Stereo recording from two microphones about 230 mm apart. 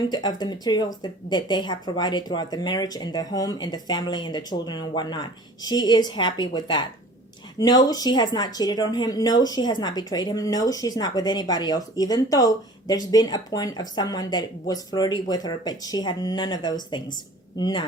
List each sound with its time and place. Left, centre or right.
0.1 s speech: centre